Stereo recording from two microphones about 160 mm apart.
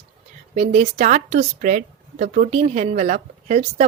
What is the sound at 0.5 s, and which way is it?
Speech, 45° right (ahead or behind).